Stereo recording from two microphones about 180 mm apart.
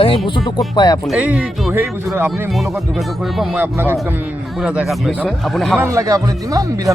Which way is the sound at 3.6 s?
10° right (ahead or behind).